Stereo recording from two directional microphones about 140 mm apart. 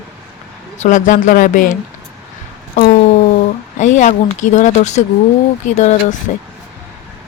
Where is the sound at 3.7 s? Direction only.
60° left (ahead or behind).